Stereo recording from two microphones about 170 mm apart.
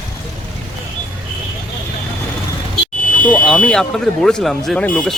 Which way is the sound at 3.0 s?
50° left (ahead or behind).